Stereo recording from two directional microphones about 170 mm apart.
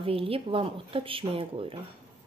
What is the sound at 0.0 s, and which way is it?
Speech, 35° right (ahead or behind).